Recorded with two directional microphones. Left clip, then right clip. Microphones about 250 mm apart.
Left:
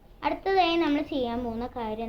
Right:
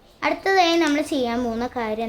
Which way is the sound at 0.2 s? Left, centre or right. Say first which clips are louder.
Right 6 dB; right.